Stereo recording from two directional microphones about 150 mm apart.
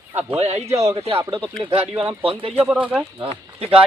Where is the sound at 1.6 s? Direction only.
40° right (ahead or behind).